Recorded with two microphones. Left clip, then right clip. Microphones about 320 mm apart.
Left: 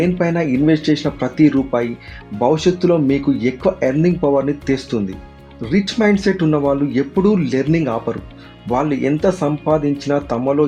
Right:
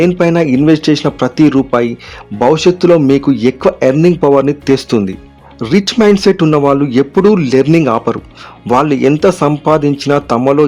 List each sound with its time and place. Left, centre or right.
0.0 s speech: right